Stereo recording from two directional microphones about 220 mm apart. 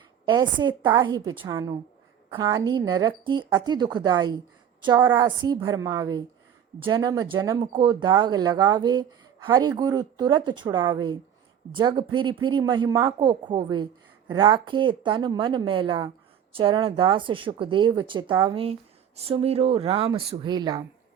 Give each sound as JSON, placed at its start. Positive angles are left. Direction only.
{"t": 0.3, "sound": "a woman's voice", "side_deg": -20}